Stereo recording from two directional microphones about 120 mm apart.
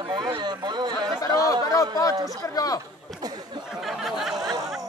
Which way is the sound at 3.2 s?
35° right (ahead or behind).